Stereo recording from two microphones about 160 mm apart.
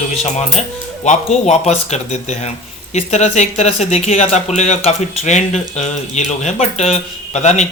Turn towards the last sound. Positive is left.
turn(degrees=45)  # may be behind; listen again after turning